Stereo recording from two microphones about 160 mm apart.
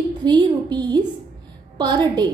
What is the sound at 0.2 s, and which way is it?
A woman's voice, 30° right (ahead or behind).